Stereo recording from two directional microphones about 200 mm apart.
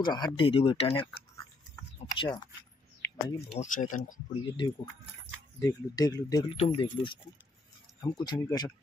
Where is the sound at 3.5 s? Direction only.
35° left (ahead or behind).